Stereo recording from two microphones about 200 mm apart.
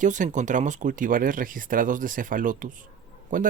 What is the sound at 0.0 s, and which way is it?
Speech, 40° right (ahead or behind).